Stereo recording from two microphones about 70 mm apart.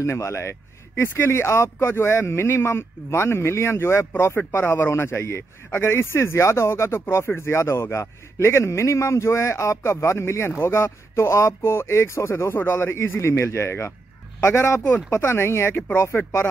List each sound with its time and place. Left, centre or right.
0.0 s a man's voice: left